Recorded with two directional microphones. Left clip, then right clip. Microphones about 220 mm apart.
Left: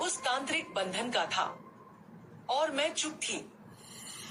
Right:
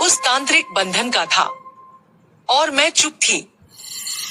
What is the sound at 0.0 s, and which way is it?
Speech, 45° right (ahead or behind).